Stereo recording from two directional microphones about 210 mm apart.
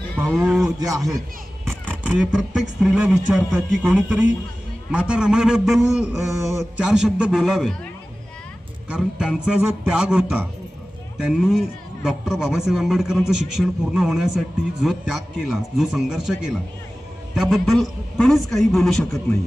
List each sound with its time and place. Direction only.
0.2 s a man's voice: centre (ahead or behind)
0.9 s a man's voice: 15° right (ahead or behind)
1.9 s a man's voice: 5° right (ahead or behind)
8.9 s a man's voice: 5° right (ahead or behind)